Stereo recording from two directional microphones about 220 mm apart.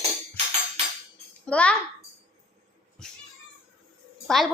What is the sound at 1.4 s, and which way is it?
Female singing, 5° left (ahead or behind).